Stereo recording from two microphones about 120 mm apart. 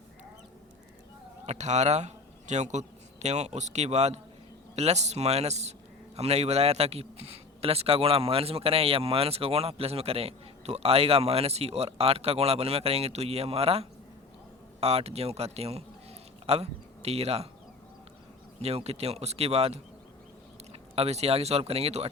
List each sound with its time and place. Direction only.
1.5 s a man's voice: 75° right (ahead or behind); by 17.5 s 60° right (ahead or behind)
18.6 s a man's voice: 60° right (ahead or behind)
20.9 s a man's voice: 60° right (ahead or behind)